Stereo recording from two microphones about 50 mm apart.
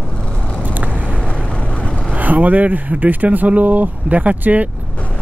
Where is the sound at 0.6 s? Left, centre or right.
Right.